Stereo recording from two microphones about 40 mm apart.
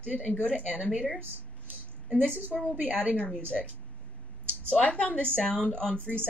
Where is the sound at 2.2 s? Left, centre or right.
Right.